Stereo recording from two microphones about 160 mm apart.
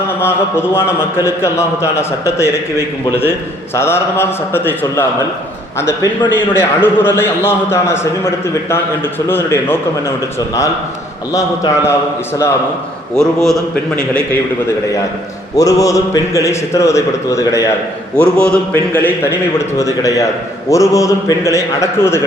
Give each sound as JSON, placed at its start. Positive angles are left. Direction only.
{"t": 0.2, "sound": "a man's voice", "side_deg": 15}
{"t": 9.3, "sound": "a man's voice", "side_deg": 15}
{"t": 11.3, "sound": "a man's voice", "side_deg": 20}
{"t": 13.1, "sound": "a man's voice", "side_deg": 5}
{"t": 15.5, "sound": "a man's voice", "side_deg": 20}
{"t": 18.2, "sound": "a man's voice", "side_deg": 5}
{"t": 19.8, "sound": "a man's voice", "side_deg": 20}